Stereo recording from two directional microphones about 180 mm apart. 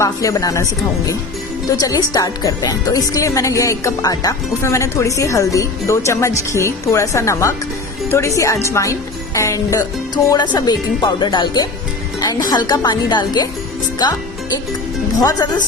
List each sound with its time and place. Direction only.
0.0 s speech: 20° left (ahead or behind)
15.2 s speech: 20° left (ahead or behind)